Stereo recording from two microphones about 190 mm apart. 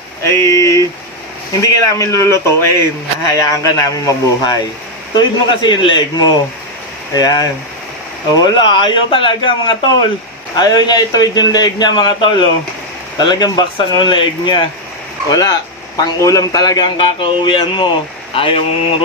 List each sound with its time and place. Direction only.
0.3 s a sound: 15° left (ahead or behind)
1.6 s a man's voice: 15° left (ahead or behind)
16.0 s a man's voice: 15° left (ahead or behind)